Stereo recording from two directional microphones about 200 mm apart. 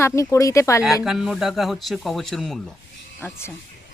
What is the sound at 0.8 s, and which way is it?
Speech, centre (ahead or behind).